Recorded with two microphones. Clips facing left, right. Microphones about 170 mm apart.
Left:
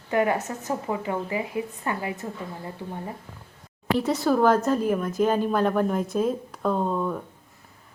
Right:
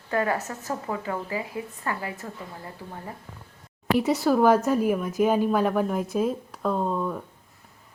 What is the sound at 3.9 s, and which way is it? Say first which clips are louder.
A woman's voice: right 1 dB; 5° right (ahead or behind).